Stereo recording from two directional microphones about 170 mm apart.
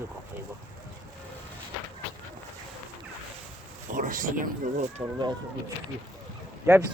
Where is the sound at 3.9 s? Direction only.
50° right (ahead or behind).